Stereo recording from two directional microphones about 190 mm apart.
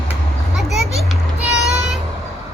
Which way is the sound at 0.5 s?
Centre (ahead or behind).